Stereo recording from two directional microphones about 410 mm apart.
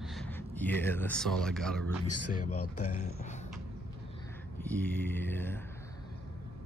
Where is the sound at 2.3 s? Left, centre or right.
Centre.